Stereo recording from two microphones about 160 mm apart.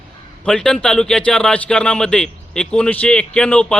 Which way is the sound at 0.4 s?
5° left (ahead or behind).